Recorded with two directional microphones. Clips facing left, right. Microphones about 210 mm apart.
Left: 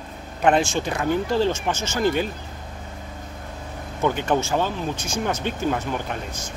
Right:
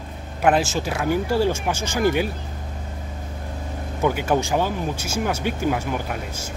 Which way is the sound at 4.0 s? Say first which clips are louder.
Right 1 dB; 10° right (ahead or behind).